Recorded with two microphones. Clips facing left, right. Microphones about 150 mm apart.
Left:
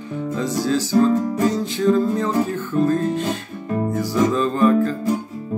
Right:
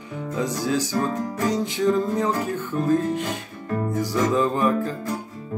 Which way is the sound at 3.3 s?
20° left (ahead or behind).